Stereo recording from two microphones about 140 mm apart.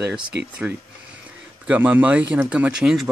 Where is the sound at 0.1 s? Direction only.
10° right (ahead or behind).